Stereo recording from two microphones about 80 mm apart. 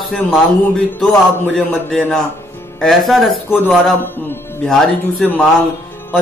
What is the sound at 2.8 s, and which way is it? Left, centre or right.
Speech, centre.